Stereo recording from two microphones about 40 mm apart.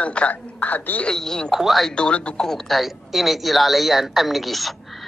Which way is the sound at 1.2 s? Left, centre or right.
Centre.